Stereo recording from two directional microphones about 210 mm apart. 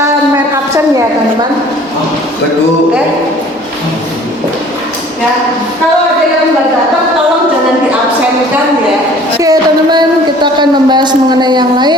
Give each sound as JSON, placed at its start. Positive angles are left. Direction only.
{"t": 9.4, "sound": "speech", "side_deg": -20}